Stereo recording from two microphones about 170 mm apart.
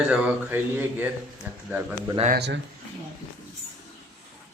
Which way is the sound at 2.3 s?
85° right.